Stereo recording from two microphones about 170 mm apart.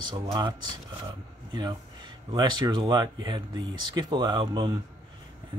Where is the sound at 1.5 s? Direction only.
25° right (ahead or behind).